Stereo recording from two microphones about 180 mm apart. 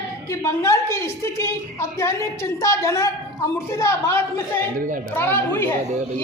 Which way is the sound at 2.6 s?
15° left (ahead or behind).